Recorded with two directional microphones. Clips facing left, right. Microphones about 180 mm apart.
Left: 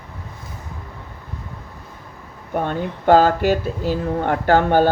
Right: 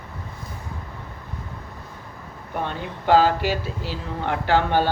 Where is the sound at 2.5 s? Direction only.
45° left (ahead or behind).